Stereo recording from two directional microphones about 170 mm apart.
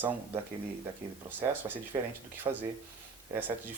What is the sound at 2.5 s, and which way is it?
Speech, 25° right (ahead or behind).